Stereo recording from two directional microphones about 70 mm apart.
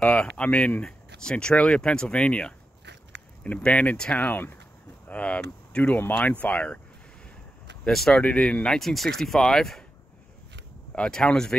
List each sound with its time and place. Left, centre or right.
0.0 s speech: centre
7.8 s speech: centre
8.7 s speech: centre
10.9 s speech: centre